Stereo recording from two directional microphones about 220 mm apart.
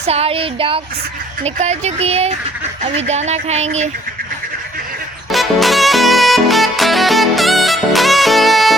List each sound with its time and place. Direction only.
0.1 s speech: 25° right (ahead or behind)
2.9 s a sound: 30° right (ahead or behind)
5.3 s music: centre (ahead or behind)